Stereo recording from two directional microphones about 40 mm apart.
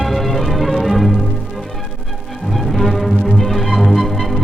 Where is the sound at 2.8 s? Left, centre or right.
Centre.